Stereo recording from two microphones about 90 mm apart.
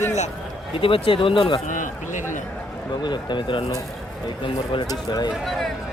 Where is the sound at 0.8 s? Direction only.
90° left; by 1.6 s 65° left (ahead or behind).